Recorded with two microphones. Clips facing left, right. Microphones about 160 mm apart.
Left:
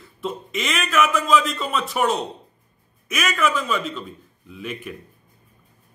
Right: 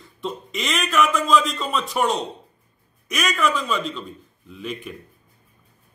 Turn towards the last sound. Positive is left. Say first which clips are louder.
# even
turn(degrees=5)  # may be behind; listen again after turning